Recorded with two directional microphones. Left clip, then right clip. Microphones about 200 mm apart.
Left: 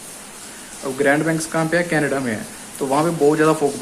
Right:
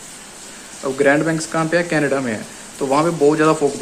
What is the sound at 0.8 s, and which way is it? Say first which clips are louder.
Speech: right 2 dB; 15° right (ahead or behind).